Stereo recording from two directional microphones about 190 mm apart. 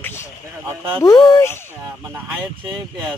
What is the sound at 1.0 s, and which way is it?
Speech, 15° left (ahead or behind).